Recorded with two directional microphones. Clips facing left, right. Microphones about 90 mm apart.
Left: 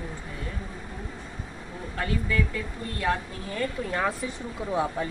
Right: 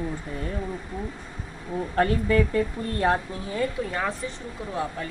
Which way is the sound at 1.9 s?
40° right (ahead or behind).